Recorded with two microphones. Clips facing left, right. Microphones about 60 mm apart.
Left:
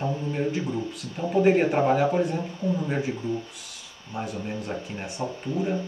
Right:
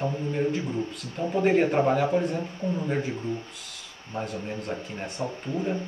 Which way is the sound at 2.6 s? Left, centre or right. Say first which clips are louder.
Left 3 dB; right.